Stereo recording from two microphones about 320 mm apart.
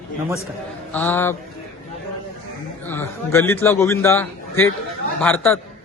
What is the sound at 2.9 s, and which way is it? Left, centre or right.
A man's voice, centre.